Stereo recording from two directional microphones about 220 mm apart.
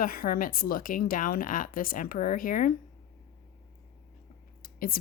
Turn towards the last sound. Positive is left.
turn(degrees=40)  # may be behind; listen again after turning